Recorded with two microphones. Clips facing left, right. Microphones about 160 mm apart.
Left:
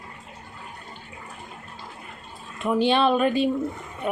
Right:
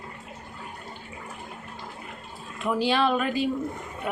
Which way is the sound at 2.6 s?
25° left (ahead or behind).